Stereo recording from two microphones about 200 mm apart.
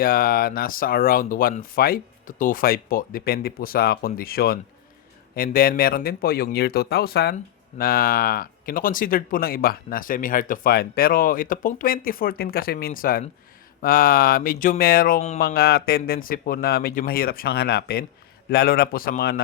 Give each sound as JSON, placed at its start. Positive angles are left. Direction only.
{"t": 0.0, "sound": "speech", "side_deg": 45}